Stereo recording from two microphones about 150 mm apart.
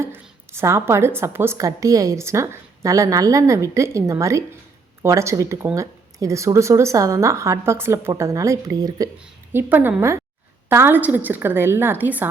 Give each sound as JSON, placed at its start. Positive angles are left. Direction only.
{"t": 0.0, "sound": "a woman's voice", "side_deg": -15}